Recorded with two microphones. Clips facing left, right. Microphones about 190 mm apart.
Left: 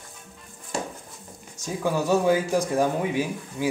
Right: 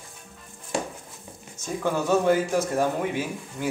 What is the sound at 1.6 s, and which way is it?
Speech, 10° left (ahead or behind).